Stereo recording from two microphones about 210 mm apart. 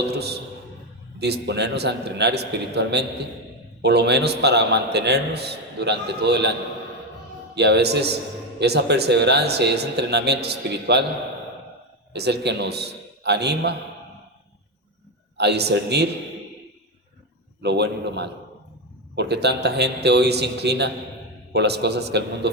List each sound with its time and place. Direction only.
1.2 s a man's voice: 55° right (ahead or behind)
7.5 s a man's voice: 55° right (ahead or behind)
12.1 s a man's voice: 55° right (ahead or behind)
15.4 s a man's voice: 50° right (ahead or behind)
17.6 s a man's voice: 55° right (ahead or behind)